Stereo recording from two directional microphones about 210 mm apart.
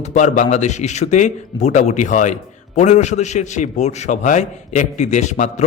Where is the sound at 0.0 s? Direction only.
35° left (ahead or behind).